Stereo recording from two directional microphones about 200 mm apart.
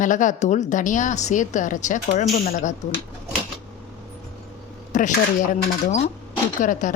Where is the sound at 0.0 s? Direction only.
40° left (ahead or behind).